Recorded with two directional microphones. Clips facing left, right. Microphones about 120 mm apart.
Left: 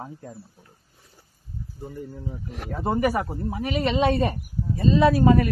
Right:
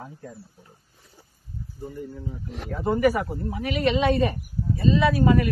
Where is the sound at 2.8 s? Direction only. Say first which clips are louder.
Right 2 dB; 30° left (ahead or behind).